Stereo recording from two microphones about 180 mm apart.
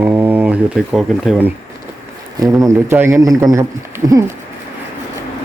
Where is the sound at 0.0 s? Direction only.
10° right (ahead or behind).